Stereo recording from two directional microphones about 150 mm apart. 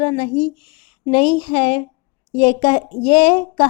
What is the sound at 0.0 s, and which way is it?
A woman's voice, 35° left (ahead or behind).